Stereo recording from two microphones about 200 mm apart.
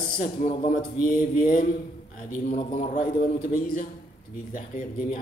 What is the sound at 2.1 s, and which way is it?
A man's voice, 45° left (ahead or behind).